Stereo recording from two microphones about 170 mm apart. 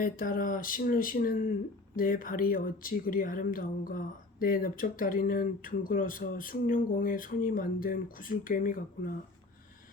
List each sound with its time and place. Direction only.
0.0 s speech: 55° left (ahead or behind)